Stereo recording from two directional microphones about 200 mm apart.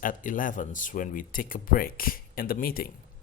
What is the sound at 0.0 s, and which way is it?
Speech, 40° left (ahead or behind).